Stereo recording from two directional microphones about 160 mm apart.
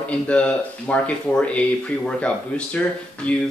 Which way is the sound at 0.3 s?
10° left (ahead or behind).